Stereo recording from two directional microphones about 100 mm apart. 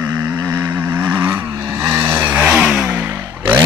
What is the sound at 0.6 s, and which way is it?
Vehicle, 35° right (ahead or behind).